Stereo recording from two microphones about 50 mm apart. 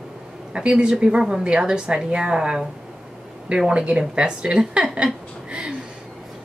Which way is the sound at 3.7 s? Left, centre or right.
Right.